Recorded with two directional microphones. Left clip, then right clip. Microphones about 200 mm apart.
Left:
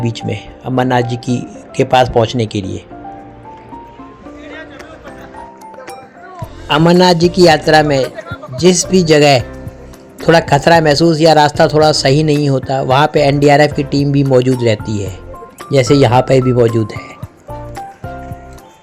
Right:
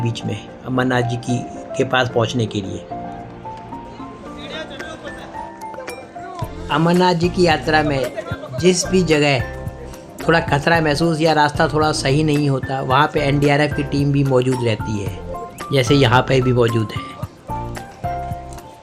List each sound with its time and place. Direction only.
0.0 s speech: 15° left (ahead or behind)
6.7 s a man's voice: 35° left (ahead or behind)